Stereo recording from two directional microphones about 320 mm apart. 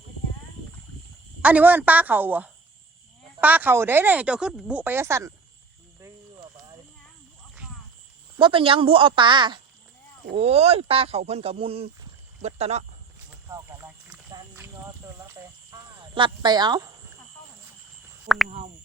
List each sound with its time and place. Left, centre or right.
1.4 s speech: centre
8.4 s speech: centre
13.5 s wild animals: centre
15.7 s speech: centre
18.4 s speech: right